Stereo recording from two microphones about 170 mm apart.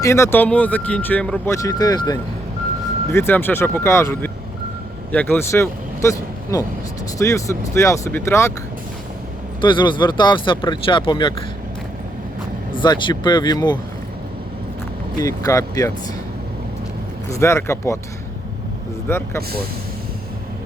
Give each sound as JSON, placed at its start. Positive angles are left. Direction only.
{"t": 0.0, "sound": "speech", "side_deg": 15}
{"t": 1.5, "sound": "speech", "side_deg": 20}
{"t": 9.6, "sound": "speech", "side_deg": 30}
{"t": 12.8, "sound": "speech", "side_deg": 25}
{"t": 15.2, "sound": "speech", "side_deg": 20}
{"t": 17.3, "sound": "speech", "side_deg": 15}
{"t": 19.0, "sound": "speech", "side_deg": 15}